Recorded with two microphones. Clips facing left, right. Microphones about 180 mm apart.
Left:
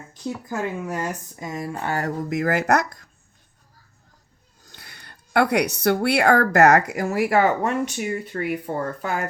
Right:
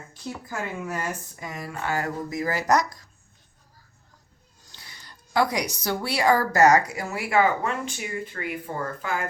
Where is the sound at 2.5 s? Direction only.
60° left (ahead or behind).